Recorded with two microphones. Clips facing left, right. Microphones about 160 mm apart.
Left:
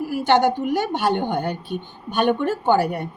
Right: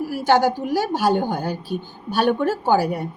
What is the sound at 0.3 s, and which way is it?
A woman's voice, 5° right (ahead or behind).